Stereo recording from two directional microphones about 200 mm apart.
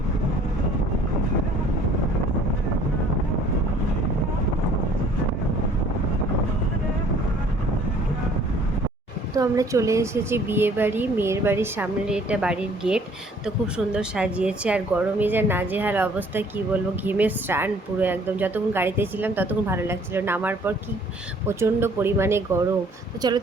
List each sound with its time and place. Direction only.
9.3 s a woman's voice: 15° right (ahead or behind)